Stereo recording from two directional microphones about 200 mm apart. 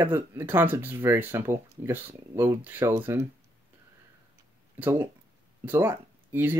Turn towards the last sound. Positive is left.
turn(degrees=-10)  # may be behind; listen again after turning